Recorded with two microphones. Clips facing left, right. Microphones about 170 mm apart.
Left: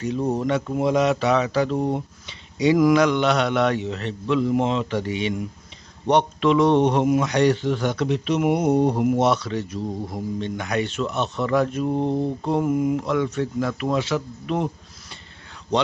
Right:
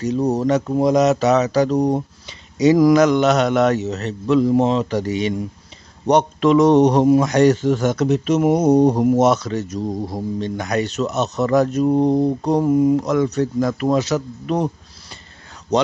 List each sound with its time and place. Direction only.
0.0 s speech: 40° right (ahead or behind)